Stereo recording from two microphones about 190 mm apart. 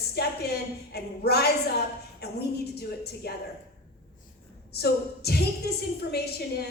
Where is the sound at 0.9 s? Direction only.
55° left (ahead or behind).